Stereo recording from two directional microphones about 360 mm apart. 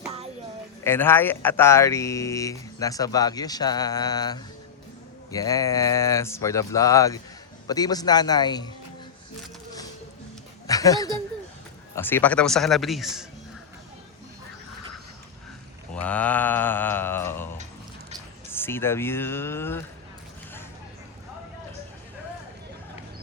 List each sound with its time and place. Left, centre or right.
0.9 s speech: centre
10.7 s speech: centre
16.0 s speech: centre
18.5 s speech: centre